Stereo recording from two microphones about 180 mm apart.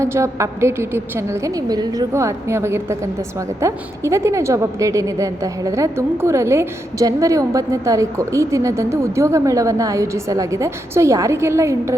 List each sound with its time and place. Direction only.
0.0 s a woman's voice: 15° right (ahead or behind)